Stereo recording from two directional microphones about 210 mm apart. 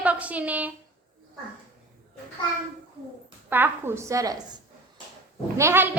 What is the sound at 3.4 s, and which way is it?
Speech, 10° right (ahead or behind).